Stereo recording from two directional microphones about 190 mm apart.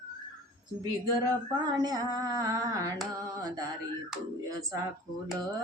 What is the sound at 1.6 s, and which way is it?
Female singing, 20° right (ahead or behind).